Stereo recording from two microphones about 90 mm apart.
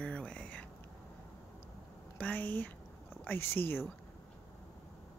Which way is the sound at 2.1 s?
15° left (ahead or behind).